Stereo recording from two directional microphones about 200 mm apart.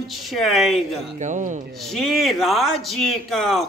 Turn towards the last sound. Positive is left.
turn(degrees=0)  # may be behind; listen again after turning